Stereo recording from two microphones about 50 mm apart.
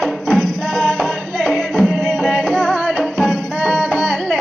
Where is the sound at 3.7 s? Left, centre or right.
Centre.